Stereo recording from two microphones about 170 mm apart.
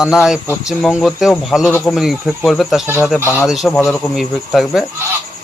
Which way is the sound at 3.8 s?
15° left (ahead or behind).